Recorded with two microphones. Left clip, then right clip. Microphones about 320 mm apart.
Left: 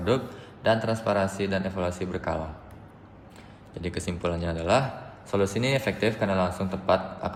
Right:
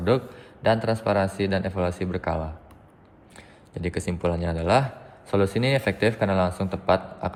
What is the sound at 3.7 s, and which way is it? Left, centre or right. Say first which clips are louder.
A man's voice: right 3 dB; right.